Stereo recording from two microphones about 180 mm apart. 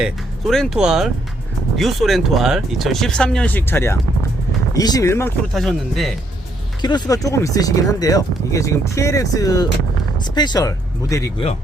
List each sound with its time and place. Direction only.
0.0 s speech: centre (ahead or behind)
5.5 s speech: centre (ahead or behind)
6.8 s speech: 20° left (ahead or behind)